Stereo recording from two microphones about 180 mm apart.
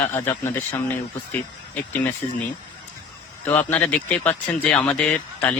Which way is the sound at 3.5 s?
10° left (ahead or behind).